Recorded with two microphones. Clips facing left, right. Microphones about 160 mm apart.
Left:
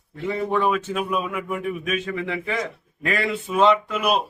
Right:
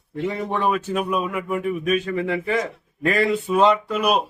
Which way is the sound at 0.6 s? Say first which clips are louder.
Right 1 dB; 40° right (ahead or behind).